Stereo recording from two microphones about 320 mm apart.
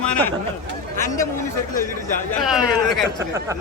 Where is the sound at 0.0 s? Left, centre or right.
Centre.